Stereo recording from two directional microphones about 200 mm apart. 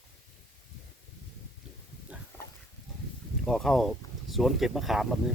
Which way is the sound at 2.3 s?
10° left (ahead or behind).